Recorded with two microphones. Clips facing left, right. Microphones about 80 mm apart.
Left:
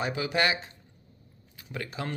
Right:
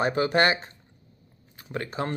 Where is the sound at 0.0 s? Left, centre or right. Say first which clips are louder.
Right 5 dB; right.